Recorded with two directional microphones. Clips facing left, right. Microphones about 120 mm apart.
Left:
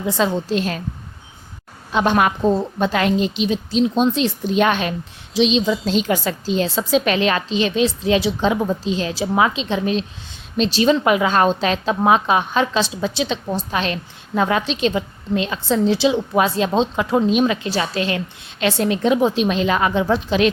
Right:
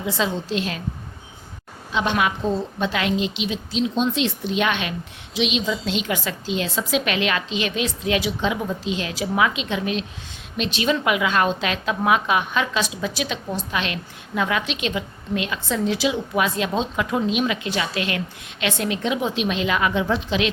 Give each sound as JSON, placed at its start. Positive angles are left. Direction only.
{"t": 0.0, "sound": "a woman's voice", "side_deg": 45}
{"t": 1.9, "sound": "a woman's voice", "side_deg": 50}